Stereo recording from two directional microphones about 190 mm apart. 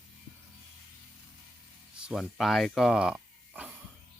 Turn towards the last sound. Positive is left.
turn(degrees=-5)  # may be behind; listen again after turning